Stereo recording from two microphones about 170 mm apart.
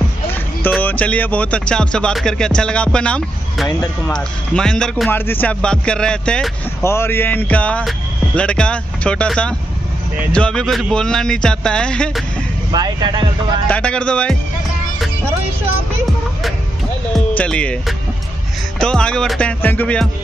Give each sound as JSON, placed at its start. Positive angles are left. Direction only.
{"t": 0.3, "sound": "speech", "side_deg": 10}
{"t": 6.8, "sound": "speech", "side_deg": 15}
{"t": 12.7, "sound": "speech", "side_deg": -25}
{"t": 13.7, "sound": "speech", "side_deg": 5}
{"t": 17.4, "sound": "speech", "side_deg": 5}